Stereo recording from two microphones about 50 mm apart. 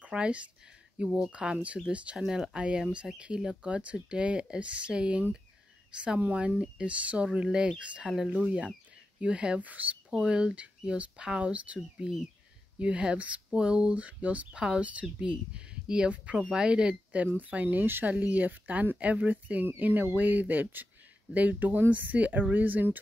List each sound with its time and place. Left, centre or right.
0.0 s speech: right
10.1 s speech: centre
14.5 s speech: centre; by 17.6 s right
17.6 s speech: right
18.0 s speech: right